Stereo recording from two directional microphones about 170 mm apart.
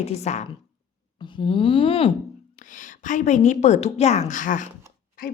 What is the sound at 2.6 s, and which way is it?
A woman's voice, 50° left (ahead or behind).